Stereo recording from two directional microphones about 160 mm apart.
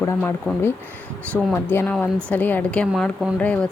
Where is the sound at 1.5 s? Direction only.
10° left (ahead or behind).